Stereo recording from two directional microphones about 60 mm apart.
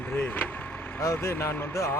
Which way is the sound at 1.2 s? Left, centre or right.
Left.